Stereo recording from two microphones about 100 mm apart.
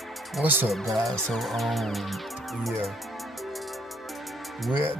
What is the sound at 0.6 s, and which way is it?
Music, centre (ahead or behind).